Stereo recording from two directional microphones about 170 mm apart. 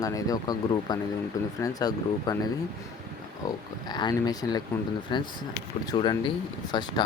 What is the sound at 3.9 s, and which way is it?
Speech, 25° left (ahead or behind).